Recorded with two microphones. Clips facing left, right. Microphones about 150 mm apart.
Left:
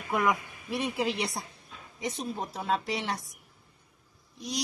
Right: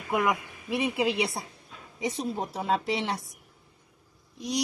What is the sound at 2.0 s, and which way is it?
Speech, 25° right (ahead or behind).